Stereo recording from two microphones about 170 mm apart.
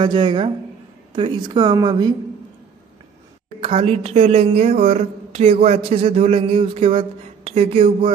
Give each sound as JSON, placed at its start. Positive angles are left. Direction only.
{"t": 0.0, "sound": "a woman's voice", "side_deg": -25}
{"t": 3.6, "sound": "speech", "side_deg": -35}